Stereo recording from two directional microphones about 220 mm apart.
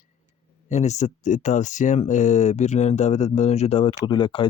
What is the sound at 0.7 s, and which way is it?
Speech, 30° left (ahead or behind).